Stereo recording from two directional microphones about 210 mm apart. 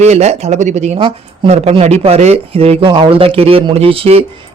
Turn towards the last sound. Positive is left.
turn(degrees=-25)  # may be behind; listen again after turning